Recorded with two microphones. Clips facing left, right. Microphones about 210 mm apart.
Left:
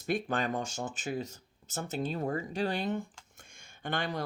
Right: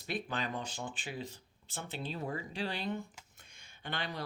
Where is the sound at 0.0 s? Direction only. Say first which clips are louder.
Left 6 dB; 50° left (ahead or behind).